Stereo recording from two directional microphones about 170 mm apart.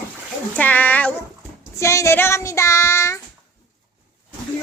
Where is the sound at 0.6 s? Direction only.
10° left (ahead or behind).